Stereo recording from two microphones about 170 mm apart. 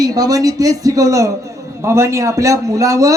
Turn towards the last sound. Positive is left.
turn(degrees=-20)  # may be behind; listen again after turning